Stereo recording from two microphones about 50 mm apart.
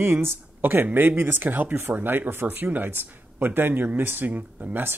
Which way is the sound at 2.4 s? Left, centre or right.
Right.